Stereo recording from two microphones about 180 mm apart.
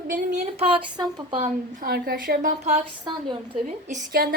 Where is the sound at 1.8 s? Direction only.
55° right (ahead or behind).